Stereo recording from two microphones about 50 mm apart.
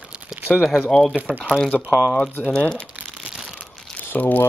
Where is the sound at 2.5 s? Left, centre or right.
Left.